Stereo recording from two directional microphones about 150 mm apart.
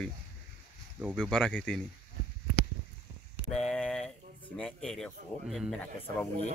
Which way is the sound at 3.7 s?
5° left (ahead or behind).